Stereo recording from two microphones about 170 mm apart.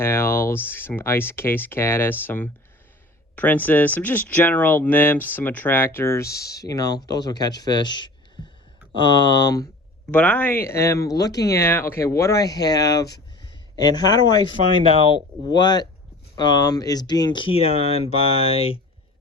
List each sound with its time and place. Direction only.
0.0 s speech: 15° left (ahead or behind)
10.1 s speech: 10° left (ahead or behind); by 18.8 s 35° left (ahead or behind)